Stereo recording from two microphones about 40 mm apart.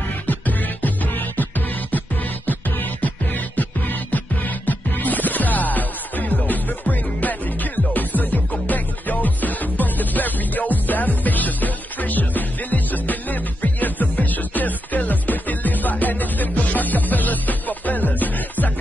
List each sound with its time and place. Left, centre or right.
0.3 s music: left
4.6 s music: left